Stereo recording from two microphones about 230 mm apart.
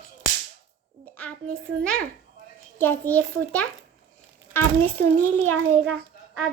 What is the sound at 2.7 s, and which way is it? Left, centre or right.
Speech, centre.